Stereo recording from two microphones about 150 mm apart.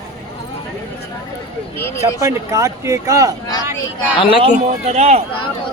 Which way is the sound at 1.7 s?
15° left (ahead or behind).